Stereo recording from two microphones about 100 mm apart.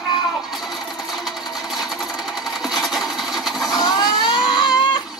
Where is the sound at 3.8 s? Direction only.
45° left (ahead or behind).